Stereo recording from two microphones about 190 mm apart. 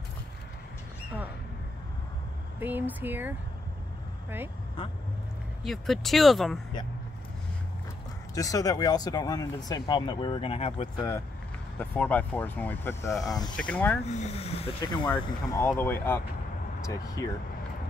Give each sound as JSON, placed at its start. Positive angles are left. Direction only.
{"t": 2.6, "sound": "speech", "side_deg": -10}
{"t": 5.6, "sound": "speech", "side_deg": 0}
{"t": 8.4, "sound": "speech", "side_deg": 20}
{"t": 11.0, "sound": "speech", "side_deg": 15}
{"t": 13.6, "sound": "speech", "side_deg": 10}
{"t": 14.0, "sound": "speech", "side_deg": 35}
{"t": 15.0, "sound": "speech", "side_deg": 10}